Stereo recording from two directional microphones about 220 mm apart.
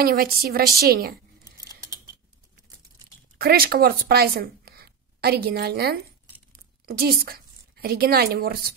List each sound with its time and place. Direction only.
0.0 s a woman's voice: 40° right (ahead or behind)
1.6 s a sound: 15° right (ahead or behind)
3.3 s a woman's voice: 45° right (ahead or behind)